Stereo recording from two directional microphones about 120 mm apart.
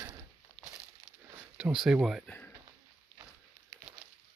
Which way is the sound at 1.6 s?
5° right (ahead or behind).